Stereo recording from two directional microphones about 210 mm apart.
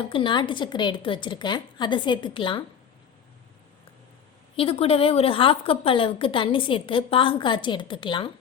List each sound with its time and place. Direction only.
0.0 s a woman's voice: 25° left (ahead or behind)
4.5 s a woman's voice: 25° left (ahead or behind)